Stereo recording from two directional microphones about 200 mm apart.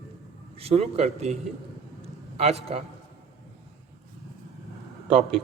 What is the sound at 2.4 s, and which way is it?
Speech, 30° right (ahead or behind).